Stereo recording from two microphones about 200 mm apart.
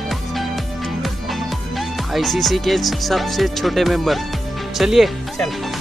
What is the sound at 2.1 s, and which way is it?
Speech, centre (ahead or behind).